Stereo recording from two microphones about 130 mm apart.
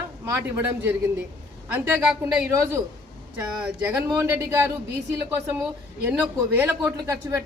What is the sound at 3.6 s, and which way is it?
A woman's voice, 10° right (ahead or behind).